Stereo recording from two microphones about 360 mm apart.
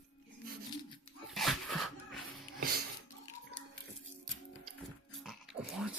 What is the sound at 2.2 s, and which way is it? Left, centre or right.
Music, right.